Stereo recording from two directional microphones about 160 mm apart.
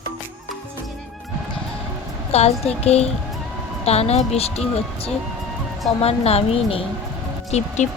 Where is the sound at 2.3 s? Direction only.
40° left (ahead or behind).